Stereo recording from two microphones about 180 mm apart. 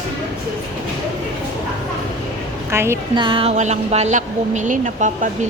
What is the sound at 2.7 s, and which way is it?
Speech, 15° right (ahead or behind).